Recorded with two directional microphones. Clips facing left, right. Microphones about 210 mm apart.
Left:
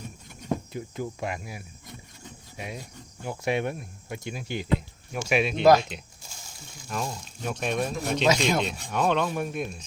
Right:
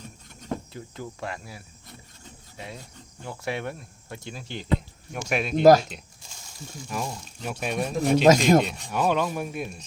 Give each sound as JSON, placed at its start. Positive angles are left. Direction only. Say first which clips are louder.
{"t": 0.4, "sound": "speech", "louder": "left 3 dB", "side_deg": 15}
{"t": 5.1, "sound": "speech", "louder": "left 1 dB", "side_deg": 5}
{"t": 5.6, "sound": "speech", "louder": "right 3 dB", "side_deg": -40}
{"t": 6.8, "sound": "speech", "louder": "even", "side_deg": -5}
{"t": 8.2, "sound": "speech", "louder": "right 6 dB", "side_deg": -45}
{"t": 8.6, "sound": "speech", "louder": "even", "side_deg": 0}